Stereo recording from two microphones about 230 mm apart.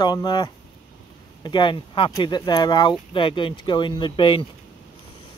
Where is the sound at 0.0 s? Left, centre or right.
Centre.